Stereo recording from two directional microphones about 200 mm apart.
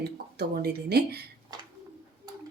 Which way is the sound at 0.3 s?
55° right (ahead or behind).